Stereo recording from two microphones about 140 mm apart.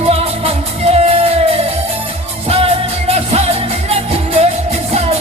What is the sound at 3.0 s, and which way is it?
Music, 50° right (ahead or behind).